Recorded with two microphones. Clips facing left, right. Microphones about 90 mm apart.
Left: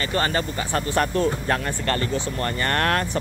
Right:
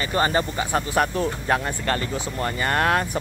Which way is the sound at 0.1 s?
20° right (ahead or behind).